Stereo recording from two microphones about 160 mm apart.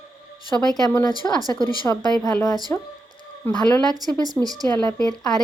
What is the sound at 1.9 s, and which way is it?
Speech, 5° left (ahead or behind).